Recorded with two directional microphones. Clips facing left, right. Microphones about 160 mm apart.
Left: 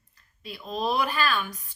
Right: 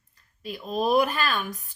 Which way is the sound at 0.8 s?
45° right (ahead or behind).